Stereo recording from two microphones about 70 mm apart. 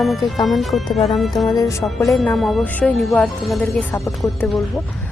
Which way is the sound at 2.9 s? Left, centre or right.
Centre.